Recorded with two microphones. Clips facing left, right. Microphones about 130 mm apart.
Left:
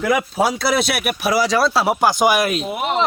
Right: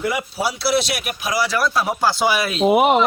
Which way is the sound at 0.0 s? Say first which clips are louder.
Left 4 dB; 90° left.